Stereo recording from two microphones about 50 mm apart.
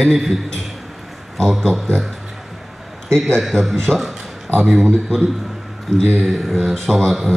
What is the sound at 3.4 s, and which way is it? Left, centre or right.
Speech, centre.